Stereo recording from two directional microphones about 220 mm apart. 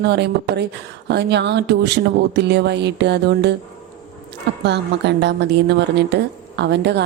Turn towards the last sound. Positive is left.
turn(degrees=-50)  # may be behind; listen again after turning